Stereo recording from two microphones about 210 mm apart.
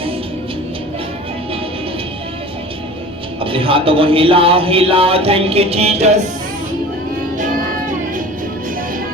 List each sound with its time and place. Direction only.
3.4 s a man's voice: 25° right (ahead or behind)